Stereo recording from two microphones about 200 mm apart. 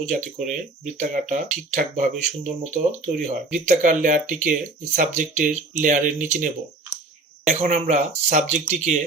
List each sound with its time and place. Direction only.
0.0 s speech: 40° right (ahead or behind)